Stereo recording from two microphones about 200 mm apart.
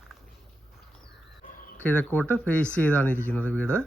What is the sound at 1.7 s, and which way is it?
Speech, 10° left (ahead or behind).